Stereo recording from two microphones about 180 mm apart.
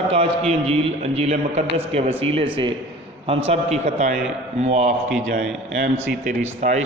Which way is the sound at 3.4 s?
35° right (ahead or behind).